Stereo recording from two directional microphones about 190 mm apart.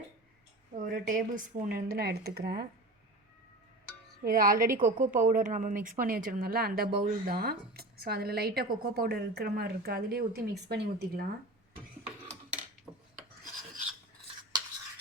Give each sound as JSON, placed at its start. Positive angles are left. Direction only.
{"t": 0.8, "sound": "speech", "side_deg": -45}
{"t": 4.2, "sound": "speech", "side_deg": -50}
{"t": 13.1, "sound": "filing", "side_deg": -40}